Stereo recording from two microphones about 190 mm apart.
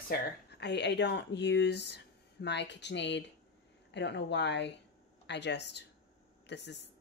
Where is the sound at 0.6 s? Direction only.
65° left (ahead or behind).